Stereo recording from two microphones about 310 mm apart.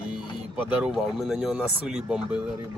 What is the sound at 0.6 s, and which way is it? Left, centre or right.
Speech, centre.